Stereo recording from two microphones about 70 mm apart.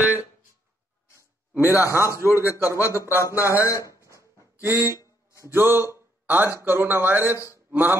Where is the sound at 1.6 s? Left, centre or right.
Right.